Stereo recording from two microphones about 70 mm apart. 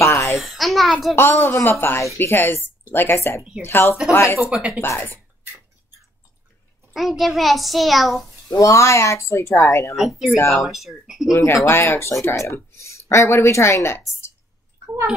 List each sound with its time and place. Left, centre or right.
0.0 s babbling: left
0.4 s a child's voice: centre
1.1 s speech: left
4.4 s speech: centre
4.8 s speech: left
6.9 s a child's voice: centre
8.5 s speech: left
9.9 s a child's voice: centre
11.2 s a woman's voice: left